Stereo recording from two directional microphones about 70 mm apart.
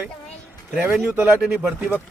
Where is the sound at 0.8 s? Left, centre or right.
Right.